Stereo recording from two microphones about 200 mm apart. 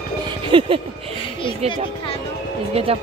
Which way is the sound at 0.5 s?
25° right (ahead or behind).